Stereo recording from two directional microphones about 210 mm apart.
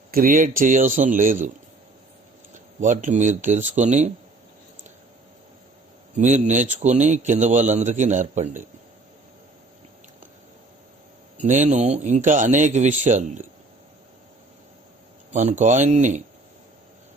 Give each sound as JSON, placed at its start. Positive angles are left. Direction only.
{"t": 0.1, "sound": "a man's voice", "side_deg": -40}
{"t": 2.8, "sound": "a man's voice", "side_deg": -35}
{"t": 6.1, "sound": "a man's voice", "side_deg": -35}
{"t": 11.3, "sound": "a man's voice", "side_deg": -35}
{"t": 15.3, "sound": "a man's voice", "side_deg": -35}